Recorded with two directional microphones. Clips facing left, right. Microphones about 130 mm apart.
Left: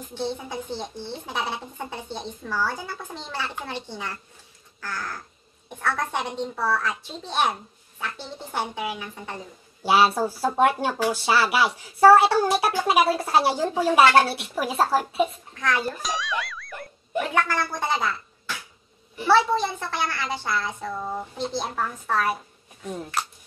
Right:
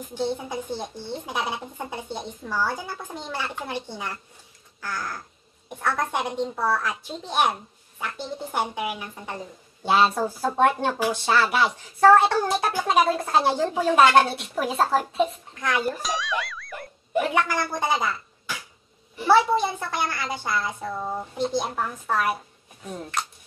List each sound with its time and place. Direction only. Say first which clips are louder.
0.1 s a child's voice: right 2 dB; 10° right (ahead or behind)
9.8 s speech: left 1 dB; 10° left (ahead or behind)
15.6 s a child's voice: even; 10° right (ahead or behind)
16.0 s a child's voice: right 1 dB; centre (ahead or behind)
22.8 s speech: left 1 dB; 5° left (ahead or behind)